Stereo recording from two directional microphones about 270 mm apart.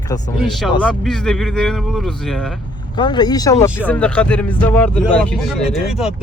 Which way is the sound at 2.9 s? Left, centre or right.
Centre.